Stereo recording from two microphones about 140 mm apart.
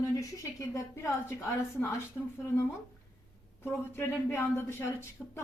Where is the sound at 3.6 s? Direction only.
15° left (ahead or behind).